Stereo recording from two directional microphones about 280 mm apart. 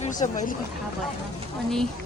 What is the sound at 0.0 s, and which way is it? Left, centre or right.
Speech, left.